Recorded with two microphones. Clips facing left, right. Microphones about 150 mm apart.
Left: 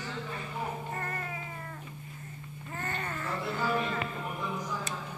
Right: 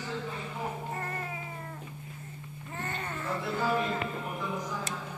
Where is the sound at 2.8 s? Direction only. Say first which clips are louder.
Even; 10° right (ahead or behind).